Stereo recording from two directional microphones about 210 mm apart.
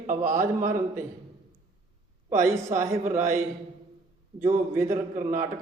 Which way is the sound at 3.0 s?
35° right (ahead or behind).